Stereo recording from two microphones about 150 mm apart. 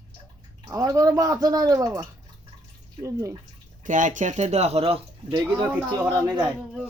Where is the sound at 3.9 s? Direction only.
60° right (ahead or behind); by 5.0 s 40° right (ahead or behind).